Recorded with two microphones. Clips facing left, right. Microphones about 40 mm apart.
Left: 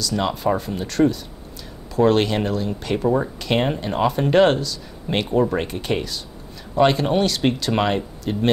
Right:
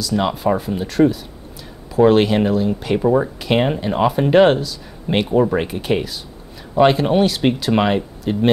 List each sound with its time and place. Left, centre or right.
0.0 s speech: centre